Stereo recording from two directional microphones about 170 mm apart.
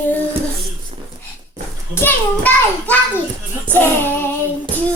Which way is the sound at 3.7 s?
10° left (ahead or behind).